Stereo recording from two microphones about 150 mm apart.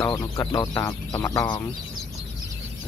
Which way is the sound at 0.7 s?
20° left (ahead or behind).